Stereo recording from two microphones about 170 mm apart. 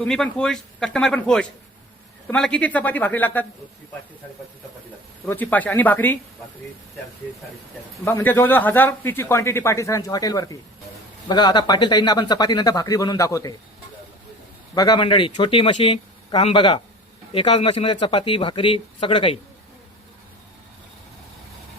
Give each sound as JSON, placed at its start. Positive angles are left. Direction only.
{"t": 0.1, "sound": "a man's voice", "side_deg": 5}
{"t": 5.3, "sound": "a man's voice", "side_deg": 10}
{"t": 8.0, "sound": "a man's voice", "side_deg": 15}
{"t": 14.8, "sound": "speech", "side_deg": 25}